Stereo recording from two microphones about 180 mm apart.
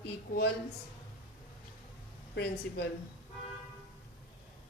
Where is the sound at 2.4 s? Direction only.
65° left (ahead or behind).